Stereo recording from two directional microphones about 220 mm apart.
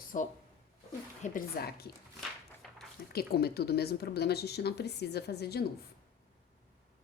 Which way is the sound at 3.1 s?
45° left (ahead or behind).